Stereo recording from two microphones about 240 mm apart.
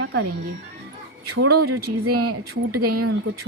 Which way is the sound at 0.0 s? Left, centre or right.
Right.